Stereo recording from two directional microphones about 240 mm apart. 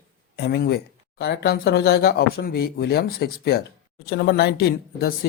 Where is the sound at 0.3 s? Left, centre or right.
Left.